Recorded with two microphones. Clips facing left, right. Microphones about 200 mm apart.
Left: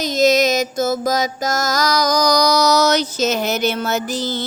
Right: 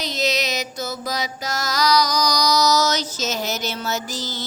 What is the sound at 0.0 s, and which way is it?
Mantra, 45° left (ahead or behind).